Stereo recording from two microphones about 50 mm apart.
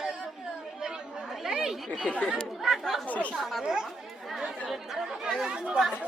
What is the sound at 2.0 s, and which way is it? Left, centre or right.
Speech, left.